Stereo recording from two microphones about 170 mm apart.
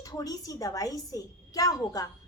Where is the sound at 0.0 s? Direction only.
20° left (ahead or behind).